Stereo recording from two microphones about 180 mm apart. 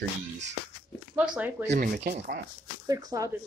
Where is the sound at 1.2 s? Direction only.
10° right (ahead or behind).